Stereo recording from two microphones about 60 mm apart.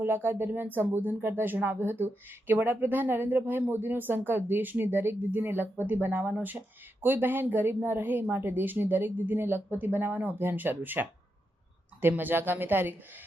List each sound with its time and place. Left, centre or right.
0.0 s speech: right